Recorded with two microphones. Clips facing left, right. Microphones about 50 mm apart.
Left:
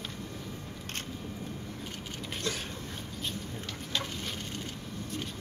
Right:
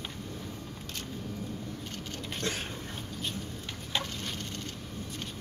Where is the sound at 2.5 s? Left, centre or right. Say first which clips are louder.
Even; right.